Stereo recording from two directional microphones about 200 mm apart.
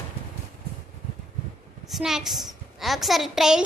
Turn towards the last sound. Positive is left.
turn(degrees=-5)  # may be behind; listen again after turning